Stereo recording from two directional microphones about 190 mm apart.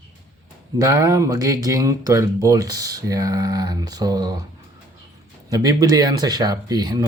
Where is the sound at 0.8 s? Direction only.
20° right (ahead or behind).